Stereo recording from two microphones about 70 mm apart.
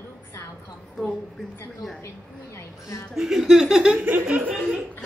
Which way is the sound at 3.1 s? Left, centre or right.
Centre.